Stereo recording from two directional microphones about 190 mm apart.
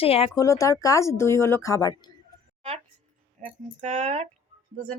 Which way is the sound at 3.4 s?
35° right (ahead or behind).